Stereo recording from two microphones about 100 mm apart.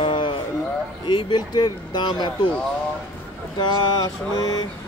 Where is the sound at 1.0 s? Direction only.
50° left (ahead or behind).